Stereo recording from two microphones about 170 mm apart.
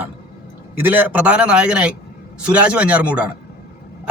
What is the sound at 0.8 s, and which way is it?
A man's voice, 10° right (ahead or behind).